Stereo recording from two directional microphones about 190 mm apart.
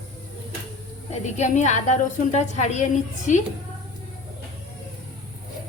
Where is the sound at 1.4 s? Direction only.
40° left (ahead or behind).